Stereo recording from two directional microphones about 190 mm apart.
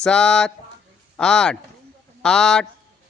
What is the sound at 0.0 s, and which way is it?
Speech, 5° left (ahead or behind).